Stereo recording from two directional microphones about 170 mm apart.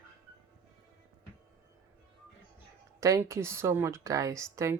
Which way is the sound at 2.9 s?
20° right (ahead or behind).